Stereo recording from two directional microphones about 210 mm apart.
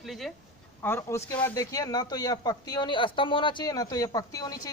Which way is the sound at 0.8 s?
10° left (ahead or behind).